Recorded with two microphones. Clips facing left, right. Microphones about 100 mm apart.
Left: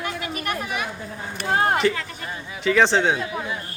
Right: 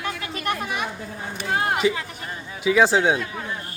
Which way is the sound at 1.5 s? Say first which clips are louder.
Left 3 dB; 40° left (ahead or behind).